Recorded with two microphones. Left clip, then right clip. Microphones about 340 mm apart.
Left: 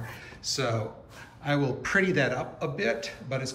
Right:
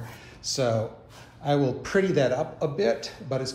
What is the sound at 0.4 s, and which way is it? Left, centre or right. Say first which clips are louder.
A man's voice: right 4 dB; centre.